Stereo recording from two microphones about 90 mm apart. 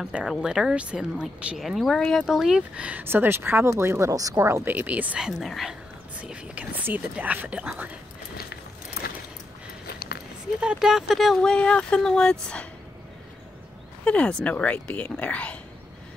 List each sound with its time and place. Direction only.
0.0 s speech: 5° right (ahead or behind)
1.6 s speech: centre (ahead or behind)
2.2 s speech: 5° right (ahead or behind)
3.0 s speech: 25° right (ahead or behind)
5.2 s speech: centre (ahead or behind)
6.2 s speech: 10° right (ahead or behind)
10.6 s speech: 10° right (ahead or behind); by 12.6 s 10° left (ahead or behind)
14.0 s speech: 15° left (ahead or behind)